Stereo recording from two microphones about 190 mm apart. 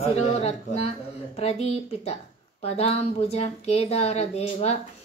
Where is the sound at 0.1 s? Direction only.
35° left (ahead or behind).